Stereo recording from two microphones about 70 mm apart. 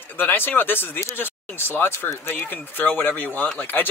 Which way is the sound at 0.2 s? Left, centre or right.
Left.